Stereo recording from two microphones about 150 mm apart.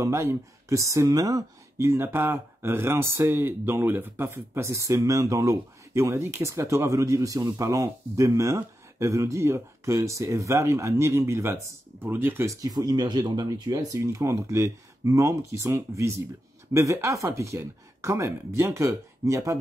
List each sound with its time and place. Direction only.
0.0 s speech: 20° right (ahead or behind)